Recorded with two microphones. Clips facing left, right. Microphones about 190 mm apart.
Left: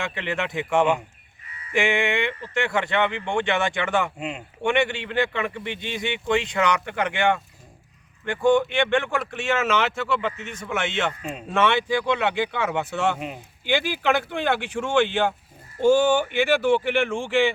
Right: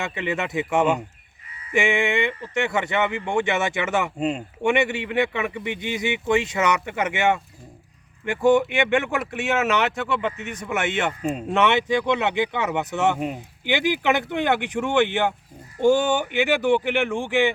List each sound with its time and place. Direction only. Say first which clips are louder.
0.0 s speech: right 1 dB; 5° right (ahead or behind)
4.2 s speech: right 7 dB; 35° right (ahead or behind)
4.6 s speech: right 1 dB; 5° right (ahead or behind)
8.4 s speech: right 1 dB; 5° right (ahead or behind)
11.2 s speech: right 7 dB; 40° right (ahead or behind)
11.5 s speech: right 1 dB; 20° right (ahead or behind)